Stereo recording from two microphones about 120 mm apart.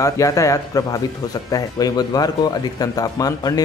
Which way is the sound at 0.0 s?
25° left (ahead or behind).